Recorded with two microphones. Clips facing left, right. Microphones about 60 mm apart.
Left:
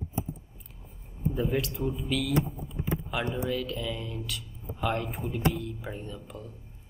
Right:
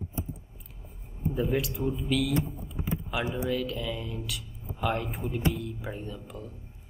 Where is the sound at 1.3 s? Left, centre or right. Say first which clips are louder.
Right 1 dB; centre.